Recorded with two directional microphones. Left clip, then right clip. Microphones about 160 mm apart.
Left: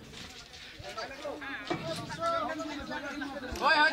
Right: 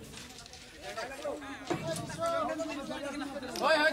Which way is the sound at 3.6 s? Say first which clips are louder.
Left 2 dB; 85° right.